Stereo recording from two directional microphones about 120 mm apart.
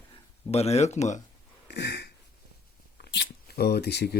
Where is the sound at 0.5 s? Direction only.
60° left (ahead or behind).